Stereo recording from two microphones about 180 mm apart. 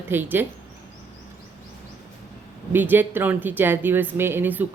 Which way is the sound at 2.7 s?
10° right (ahead or behind).